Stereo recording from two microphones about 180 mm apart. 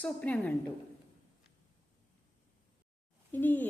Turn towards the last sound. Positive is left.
turn(degrees=10)  # may be behind; listen again after turning